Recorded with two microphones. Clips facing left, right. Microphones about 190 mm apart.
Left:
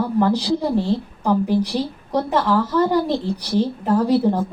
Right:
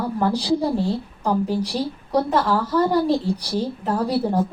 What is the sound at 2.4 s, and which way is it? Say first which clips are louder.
A woman's voice: left 2 dB; 10° right (ahead or behind).